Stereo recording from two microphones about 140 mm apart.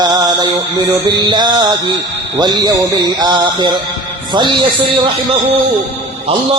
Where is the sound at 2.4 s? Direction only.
30° right (ahead or behind).